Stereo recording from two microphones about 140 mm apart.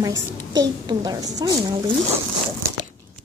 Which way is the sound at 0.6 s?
30° right (ahead or behind).